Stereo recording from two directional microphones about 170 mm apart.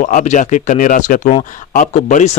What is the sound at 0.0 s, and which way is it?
Speech, 45° left (ahead or behind).